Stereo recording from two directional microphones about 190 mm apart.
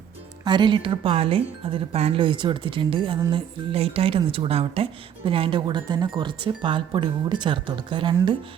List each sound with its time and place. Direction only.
0.4 s a woman's voice: 25° right (ahead or behind)